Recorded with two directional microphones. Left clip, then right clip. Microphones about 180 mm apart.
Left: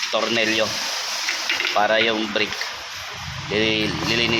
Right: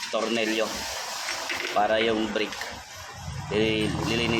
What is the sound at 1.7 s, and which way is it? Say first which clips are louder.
Speech: left 3 dB; 20° left (ahead or behind).